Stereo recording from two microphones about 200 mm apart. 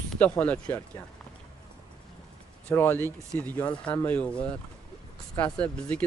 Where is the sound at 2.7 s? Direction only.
10° left (ahead or behind).